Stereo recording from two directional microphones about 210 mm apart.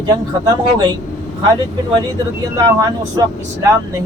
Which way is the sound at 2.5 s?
15° right (ahead or behind).